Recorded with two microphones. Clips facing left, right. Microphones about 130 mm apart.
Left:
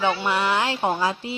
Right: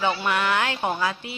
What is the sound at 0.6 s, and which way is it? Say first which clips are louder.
Speech: left 2 dB; 25° left (ahead or behind).